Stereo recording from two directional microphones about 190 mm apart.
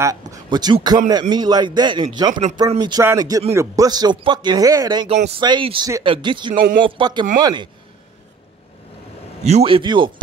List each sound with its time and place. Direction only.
0.0 s speech: 15° right (ahead or behind)
9.4 s speech: 35° right (ahead or behind)